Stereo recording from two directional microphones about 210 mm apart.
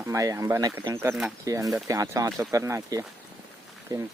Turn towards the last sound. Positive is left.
turn(degrees=-15)  # may be behind; listen again after turning